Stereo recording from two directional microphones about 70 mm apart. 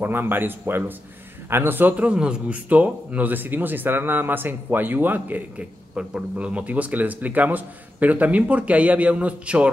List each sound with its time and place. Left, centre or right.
0.0 s a man's voice: right
5.9 s a man's voice: centre